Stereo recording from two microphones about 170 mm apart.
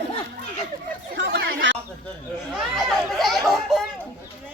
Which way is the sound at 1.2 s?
75° right (ahead or behind).